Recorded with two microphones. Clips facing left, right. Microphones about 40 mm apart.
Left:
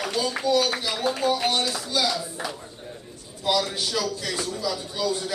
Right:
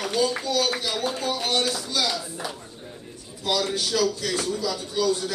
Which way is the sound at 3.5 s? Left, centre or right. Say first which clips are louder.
Even; centre.